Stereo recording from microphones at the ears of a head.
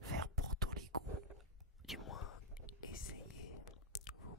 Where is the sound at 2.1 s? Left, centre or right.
Left.